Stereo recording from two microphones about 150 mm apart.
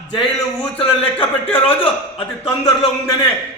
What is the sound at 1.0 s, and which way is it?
Speech, 10° left (ahead or behind).